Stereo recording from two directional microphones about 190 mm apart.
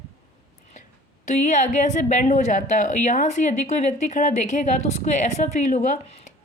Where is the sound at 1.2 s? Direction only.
40° left (ahead or behind).